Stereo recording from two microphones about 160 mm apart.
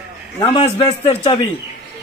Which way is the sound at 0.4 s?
30° left (ahead or behind).